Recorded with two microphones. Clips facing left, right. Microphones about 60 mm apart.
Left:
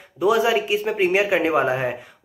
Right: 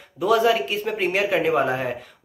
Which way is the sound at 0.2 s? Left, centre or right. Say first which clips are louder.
Even; centre.